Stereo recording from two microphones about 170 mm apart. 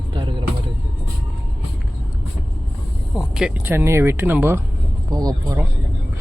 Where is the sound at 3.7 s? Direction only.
15° right (ahead or behind).